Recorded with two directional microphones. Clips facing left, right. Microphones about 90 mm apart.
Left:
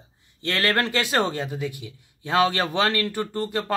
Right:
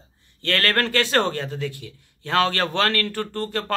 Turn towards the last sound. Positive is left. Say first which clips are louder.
# even
turn(degrees=15)  # may be behind; listen again after turning